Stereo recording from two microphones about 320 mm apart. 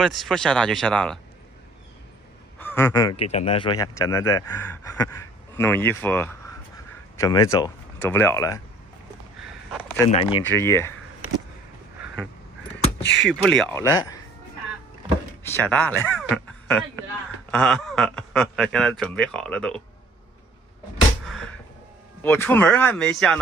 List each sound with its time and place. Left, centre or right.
0.0 s speech: centre
2.6 s speech: centre
9.5 s a sound: centre
10.1 s speech: centre
13.0 s speech: left
13.3 s speech: centre
15.5 s speech: centre
21.3 s a sound: centre
22.2 s speech: centre